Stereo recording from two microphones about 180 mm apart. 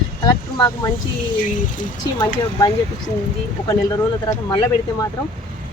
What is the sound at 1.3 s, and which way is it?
Speech, 45° left (ahead or behind).